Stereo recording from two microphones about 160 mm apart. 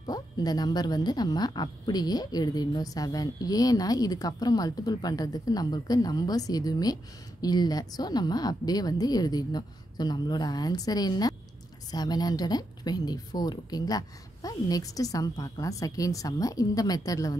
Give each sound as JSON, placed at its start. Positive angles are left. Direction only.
{"t": 0.0, "sound": "speech", "side_deg": 25}